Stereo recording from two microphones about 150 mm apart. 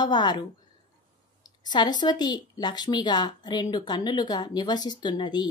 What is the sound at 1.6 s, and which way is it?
A woman's voice, 30° left (ahead or behind).